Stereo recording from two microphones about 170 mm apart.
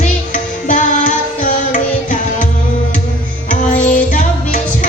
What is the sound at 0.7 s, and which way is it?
Music, 50° left (ahead or behind).